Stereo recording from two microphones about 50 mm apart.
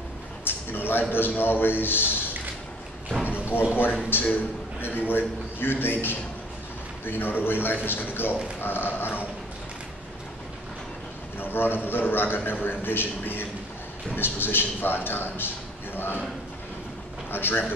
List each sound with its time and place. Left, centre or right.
0.5 s a sound: left
1.1 s a man's voice: left
3.5 s a man's voice: left
11.3 s a man's voice: left
17.3 s a man's voice: left